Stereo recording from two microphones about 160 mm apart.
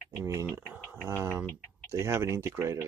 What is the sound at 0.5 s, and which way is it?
Speech, 10° right (ahead or behind).